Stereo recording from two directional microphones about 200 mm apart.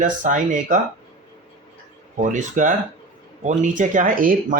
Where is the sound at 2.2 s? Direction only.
40° right (ahead or behind).